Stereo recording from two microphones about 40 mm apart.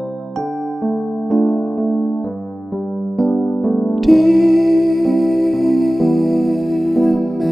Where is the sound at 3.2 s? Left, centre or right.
Centre.